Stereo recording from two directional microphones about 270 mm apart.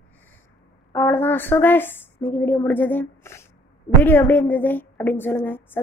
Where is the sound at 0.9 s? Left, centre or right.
Centre.